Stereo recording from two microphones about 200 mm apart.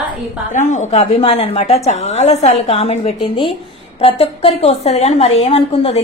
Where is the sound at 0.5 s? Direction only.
35° left (ahead or behind).